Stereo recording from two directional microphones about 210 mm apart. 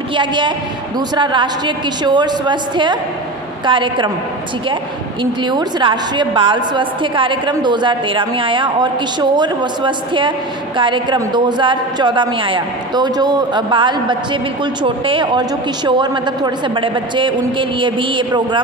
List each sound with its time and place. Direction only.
0.1 s a man's voice: 20° right (ahead or behind)
5.2 s a man's voice: 20° right (ahead or behind)